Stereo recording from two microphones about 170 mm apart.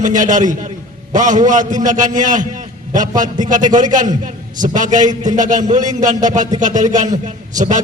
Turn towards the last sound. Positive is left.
turn(degrees=-45)  # may be behind; listen again after turning